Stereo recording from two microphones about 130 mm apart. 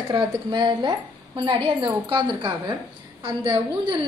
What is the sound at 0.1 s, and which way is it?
A woman's voice, 35° right (ahead or behind).